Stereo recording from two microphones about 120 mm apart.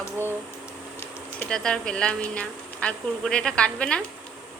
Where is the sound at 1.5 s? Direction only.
5° left (ahead or behind).